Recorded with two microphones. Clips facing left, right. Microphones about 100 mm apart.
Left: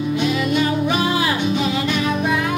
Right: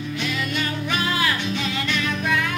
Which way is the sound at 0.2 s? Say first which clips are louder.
Left 7 dB; 20° left (ahead or behind).